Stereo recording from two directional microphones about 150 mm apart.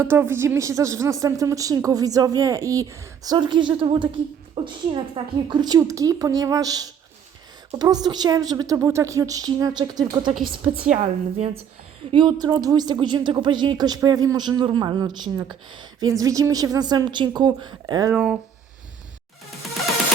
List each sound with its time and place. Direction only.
0.0 s a woman's voice: 15° right (ahead or behind)
10.9 s a woman's voice: 40° right (ahead or behind)
12.1 s a woman's voice: 30° right (ahead or behind)
18.1 s speech: 5° right (ahead or behind)